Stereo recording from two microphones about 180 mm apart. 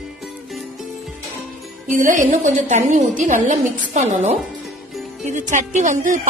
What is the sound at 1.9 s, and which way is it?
A woman's voice, 45° right (ahead or behind).